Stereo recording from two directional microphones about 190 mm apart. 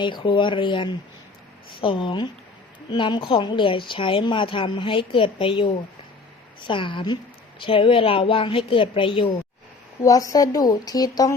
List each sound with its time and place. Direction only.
0.0 s a woman's voice: 25° left (ahead or behind)